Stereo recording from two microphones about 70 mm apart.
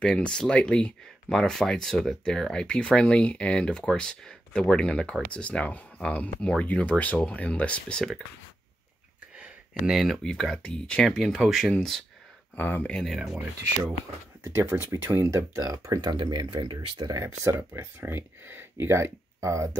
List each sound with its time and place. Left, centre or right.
0.0 s speech: centre
9.8 s speech: centre
12.5 s speech: left
12.9 s speech: centre
14.4 s speech: right
15.6 s speech: right
17.2 s speech: right